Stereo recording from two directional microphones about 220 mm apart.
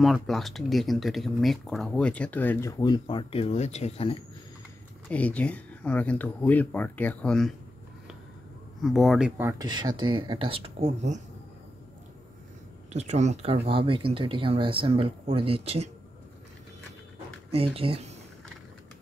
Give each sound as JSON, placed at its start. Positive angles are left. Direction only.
{"t": 0.0, "sound": "speech", "side_deg": 0}
{"t": 5.0, "sound": "speech", "side_deg": 5}
{"t": 8.8, "sound": "speech", "side_deg": 0}
{"t": 9.4, "sound": "speech", "side_deg": -15}
{"t": 12.9, "sound": "speech", "side_deg": -30}
{"t": 17.5, "sound": "speech", "side_deg": -25}